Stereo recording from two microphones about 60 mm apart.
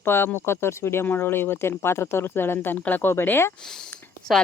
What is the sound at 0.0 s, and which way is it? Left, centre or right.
Speech, left.